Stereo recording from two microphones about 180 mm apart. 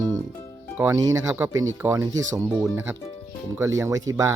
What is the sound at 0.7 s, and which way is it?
Speech, 15° right (ahead or behind).